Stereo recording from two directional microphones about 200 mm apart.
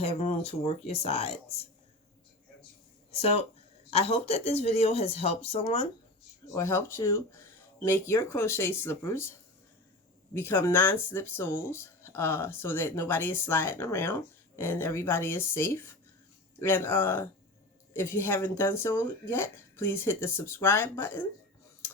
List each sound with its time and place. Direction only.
0.0 s speech: 30° left (ahead or behind)
3.1 s speech: 30° left (ahead or behind)
6.5 s speech: 15° left (ahead or behind)
10.3 s speech: 10° left (ahead or behind)